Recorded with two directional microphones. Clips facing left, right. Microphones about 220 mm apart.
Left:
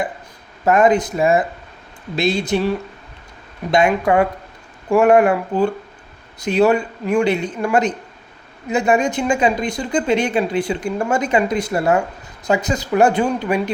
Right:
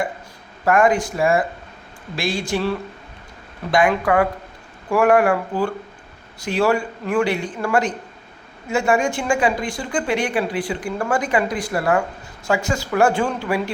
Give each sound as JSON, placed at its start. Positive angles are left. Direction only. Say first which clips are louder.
{"t": 0.6, "sound": "speech", "louder": "left 3 dB", "side_deg": 20}